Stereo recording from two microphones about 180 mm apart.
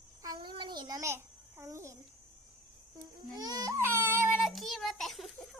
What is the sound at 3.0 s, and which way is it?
Baby cry, 20° right (ahead or behind).